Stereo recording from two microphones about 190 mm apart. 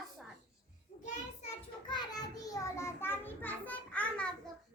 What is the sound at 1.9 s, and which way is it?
Child singing, 20° left (ahead or behind).